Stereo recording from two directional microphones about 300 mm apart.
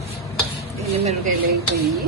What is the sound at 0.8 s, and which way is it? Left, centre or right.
Speech, centre.